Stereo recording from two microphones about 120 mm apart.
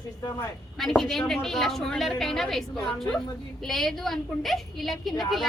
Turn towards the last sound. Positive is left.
turn(degrees=0)  # may be behind; listen again after turning